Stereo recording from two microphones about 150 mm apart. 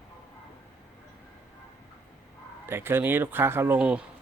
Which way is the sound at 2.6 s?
15° right (ahead or behind).